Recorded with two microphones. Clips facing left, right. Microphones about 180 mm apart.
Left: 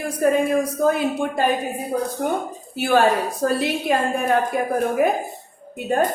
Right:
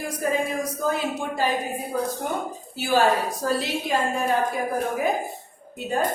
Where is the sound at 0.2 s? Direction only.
60° left (ahead or behind).